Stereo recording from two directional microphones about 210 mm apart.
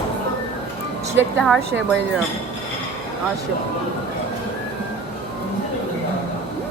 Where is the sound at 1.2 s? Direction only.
5° right (ahead or behind).